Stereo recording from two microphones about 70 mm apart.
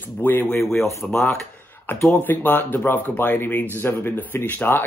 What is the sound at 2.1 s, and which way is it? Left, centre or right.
Speech, left.